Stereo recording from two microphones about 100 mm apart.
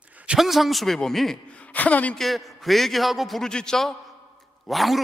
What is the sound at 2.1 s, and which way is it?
A man's voice, centre (ahead or behind).